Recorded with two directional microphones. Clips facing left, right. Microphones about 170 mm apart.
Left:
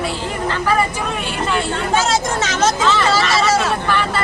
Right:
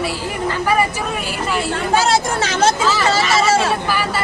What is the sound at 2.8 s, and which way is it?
A man's voice, 5° right (ahead or behind).